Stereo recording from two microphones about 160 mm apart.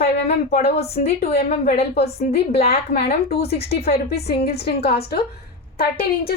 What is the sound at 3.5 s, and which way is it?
A woman's voice, 80° left.